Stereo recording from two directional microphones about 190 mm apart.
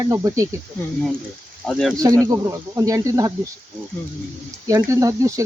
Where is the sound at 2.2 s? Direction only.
15° right (ahead or behind).